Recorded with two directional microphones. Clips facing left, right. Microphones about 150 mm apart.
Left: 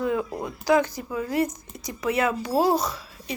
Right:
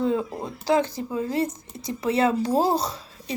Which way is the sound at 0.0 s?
25° right (ahead or behind).